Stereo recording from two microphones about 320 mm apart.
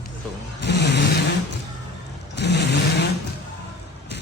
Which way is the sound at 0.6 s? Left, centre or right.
Left.